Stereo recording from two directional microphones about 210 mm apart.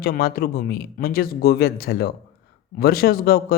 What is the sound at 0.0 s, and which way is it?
Speech, 45° left (ahead or behind).